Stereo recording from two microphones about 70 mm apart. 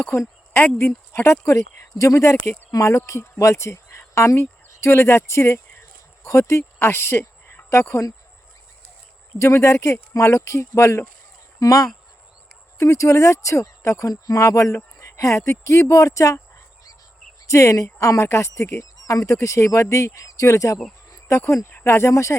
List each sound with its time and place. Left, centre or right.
0.1 s speech: left
9.4 s speech: left
17.4 s speech: left
21.1 s a sound: left
21.4 s speech: left
21.7 s speech: left